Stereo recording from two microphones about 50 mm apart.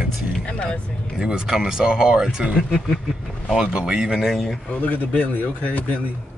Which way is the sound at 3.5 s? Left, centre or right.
Centre.